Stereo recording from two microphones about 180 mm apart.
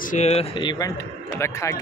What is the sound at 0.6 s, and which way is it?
Speech, 25° left (ahead or behind).